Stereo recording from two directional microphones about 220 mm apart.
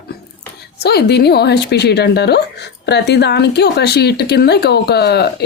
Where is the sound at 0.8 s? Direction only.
45° left (ahead or behind).